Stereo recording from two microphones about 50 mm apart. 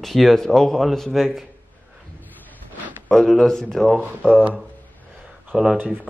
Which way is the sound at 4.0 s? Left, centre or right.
Right.